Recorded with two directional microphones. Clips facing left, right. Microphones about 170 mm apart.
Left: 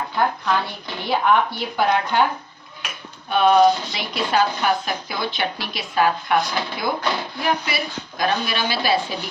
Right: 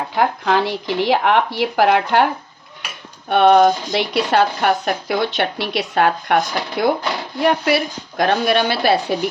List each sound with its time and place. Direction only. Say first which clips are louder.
0.2 s speech: right 4 dB; 90° right
3.2 s speech: right 3 dB; 65° right (ahead or behind)